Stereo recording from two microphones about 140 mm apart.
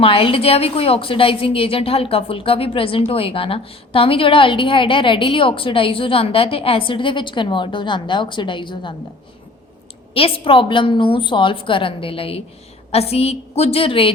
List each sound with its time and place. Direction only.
0.0 s a woman's voice: 40° left (ahead or behind)
10.2 s a woman's voice: 40° left (ahead or behind)